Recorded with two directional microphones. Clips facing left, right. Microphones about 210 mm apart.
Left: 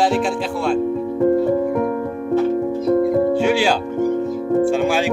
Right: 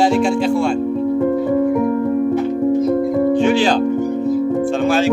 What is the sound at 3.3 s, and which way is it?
Speech, 10° left (ahead or behind).